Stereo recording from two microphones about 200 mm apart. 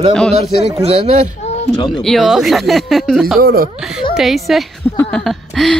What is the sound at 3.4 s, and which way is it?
Speech, 50° right (ahead or behind).